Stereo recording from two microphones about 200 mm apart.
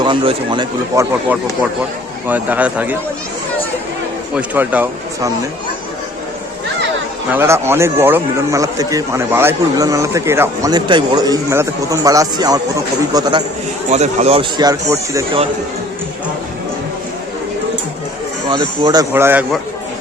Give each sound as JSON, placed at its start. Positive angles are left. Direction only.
{"t": 0.0, "sound": "speech", "side_deg": -25}
{"t": 2.2, "sound": "a man's voice", "side_deg": -10}
{"t": 4.4, "sound": "a man's voice", "side_deg": -10}
{"t": 7.3, "sound": "a man's voice", "side_deg": -15}
{"t": 13.9, "sound": "speech", "side_deg": -35}
{"t": 18.5, "sound": "speech", "side_deg": -20}
{"t": 19.1, "sound": "a man's voice", "side_deg": -10}